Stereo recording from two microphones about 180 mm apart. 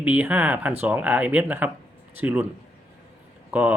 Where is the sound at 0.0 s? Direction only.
10° right (ahead or behind).